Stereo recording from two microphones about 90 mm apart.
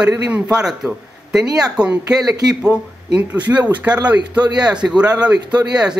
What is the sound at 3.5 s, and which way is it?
Speech, 25° right (ahead or behind).